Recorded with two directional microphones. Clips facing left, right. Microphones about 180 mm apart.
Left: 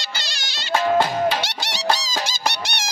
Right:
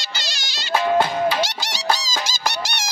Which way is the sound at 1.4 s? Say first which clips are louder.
Right 3 dB; 65° left (ahead or behind).